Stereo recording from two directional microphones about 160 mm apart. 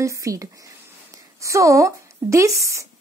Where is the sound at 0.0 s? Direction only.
20° right (ahead or behind).